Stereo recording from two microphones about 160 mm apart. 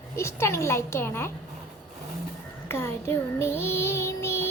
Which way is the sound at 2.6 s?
15° left (ahead or behind).